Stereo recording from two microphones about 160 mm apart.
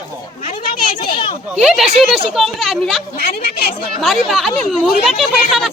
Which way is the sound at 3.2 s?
70° left (ahead or behind).